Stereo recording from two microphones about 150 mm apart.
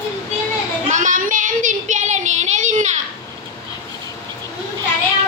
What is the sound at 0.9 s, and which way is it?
Child singing, 60° right (ahead or behind).